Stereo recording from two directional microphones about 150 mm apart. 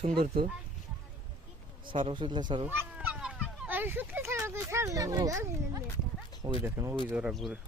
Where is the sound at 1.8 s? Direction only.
35° right (ahead or behind).